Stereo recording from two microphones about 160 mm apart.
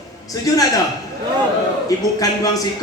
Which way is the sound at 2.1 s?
20° left (ahead or behind).